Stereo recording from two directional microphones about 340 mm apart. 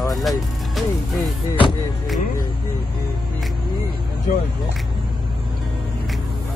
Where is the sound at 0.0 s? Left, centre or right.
Centre.